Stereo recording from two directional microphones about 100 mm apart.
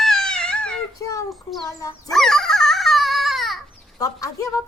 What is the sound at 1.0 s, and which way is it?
Child singing, 35° left (ahead or behind).